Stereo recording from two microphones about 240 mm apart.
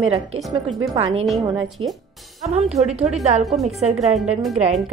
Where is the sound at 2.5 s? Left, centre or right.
Right.